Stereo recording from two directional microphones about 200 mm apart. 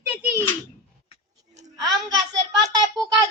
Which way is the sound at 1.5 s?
20° right (ahead or behind).